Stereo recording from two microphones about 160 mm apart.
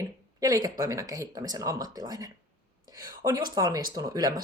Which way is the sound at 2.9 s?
20° right (ahead or behind).